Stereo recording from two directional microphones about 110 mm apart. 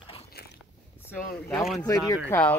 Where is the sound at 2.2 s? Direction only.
20° left (ahead or behind).